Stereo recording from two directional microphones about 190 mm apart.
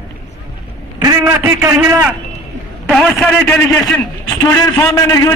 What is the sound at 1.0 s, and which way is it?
A man's voice, 10° right (ahead or behind).